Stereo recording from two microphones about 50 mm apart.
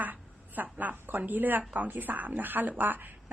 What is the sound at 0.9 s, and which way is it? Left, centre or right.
Speech, right.